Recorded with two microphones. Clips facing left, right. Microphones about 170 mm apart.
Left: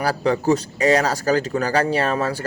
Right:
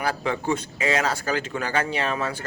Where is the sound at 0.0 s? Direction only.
40° left (ahead or behind).